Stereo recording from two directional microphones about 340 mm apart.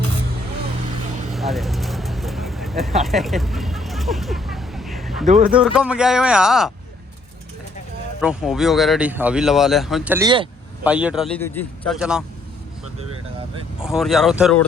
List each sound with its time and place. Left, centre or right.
1.3 s vehicle: centre
5.2 s speech: right
5.5 s speech: centre
8.2 s speech: centre
13.8 s speech: centre